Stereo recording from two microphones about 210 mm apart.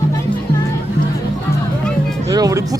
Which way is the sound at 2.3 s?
15° right (ahead or behind).